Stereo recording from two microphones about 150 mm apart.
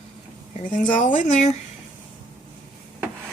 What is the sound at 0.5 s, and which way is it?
Speech, 55° left (ahead or behind).